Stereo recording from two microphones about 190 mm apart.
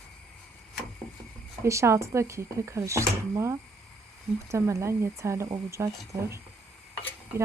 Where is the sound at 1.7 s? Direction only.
15° right (ahead or behind).